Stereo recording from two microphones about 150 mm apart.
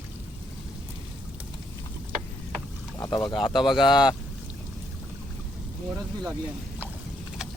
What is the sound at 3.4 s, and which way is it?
Speech, centre (ahead or behind).